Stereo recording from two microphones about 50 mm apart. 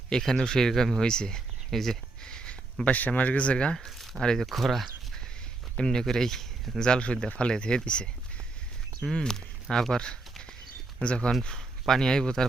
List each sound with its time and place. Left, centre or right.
0.1 s speech: centre
3.8 s a sound: centre
4.2 s speech: centre
4.4 s speech: centre
5.7 s speech: centre
9.1 s speech: centre